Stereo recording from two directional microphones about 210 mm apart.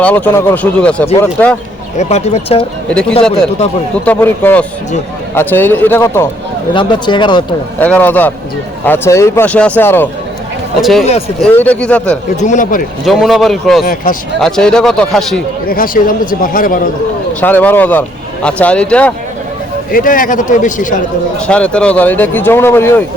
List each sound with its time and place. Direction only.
0.0 s speech: 5° left (ahead or behind)
2.0 s a man's voice: 30° left (ahead or behind)
2.9 s speech: 5° left (ahead or behind)
6.7 s speech: 20° left (ahead or behind)
7.8 s speech: 10° left (ahead or behind)
12.4 s a man's voice: 35° left (ahead or behind)
13.1 s speech: centre (ahead or behind)
13.8 s a man's voice: 40° left (ahead or behind)
14.4 s speech: 5° left (ahead or behind)
15.6 s a man's voice: 45° left (ahead or behind)
17.4 s speech: 10° left (ahead or behind)
19.9 s a man's voice: 40° left (ahead or behind)
21.4 s speech: 5° left (ahead or behind)